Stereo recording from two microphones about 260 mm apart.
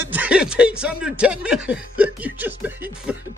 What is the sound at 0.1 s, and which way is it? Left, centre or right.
Speech, centre.